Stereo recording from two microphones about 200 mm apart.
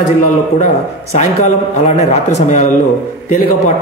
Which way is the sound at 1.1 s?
35° left (ahead or behind).